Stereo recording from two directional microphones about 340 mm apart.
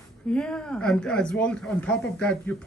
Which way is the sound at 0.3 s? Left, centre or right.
Centre.